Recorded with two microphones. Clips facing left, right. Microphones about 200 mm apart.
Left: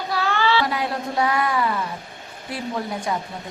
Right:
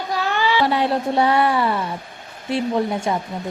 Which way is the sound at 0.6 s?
30° right (ahead or behind).